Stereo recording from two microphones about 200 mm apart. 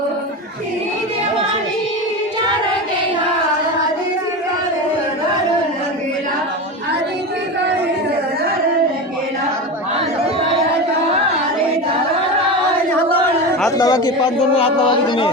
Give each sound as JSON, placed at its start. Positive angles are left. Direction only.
{"t": 13.7, "sound": "speech", "side_deg": 20}